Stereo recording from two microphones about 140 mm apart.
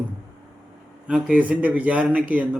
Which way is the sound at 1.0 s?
10° right (ahead or behind).